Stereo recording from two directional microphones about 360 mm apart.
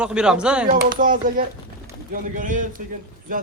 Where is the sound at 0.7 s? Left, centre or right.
Right.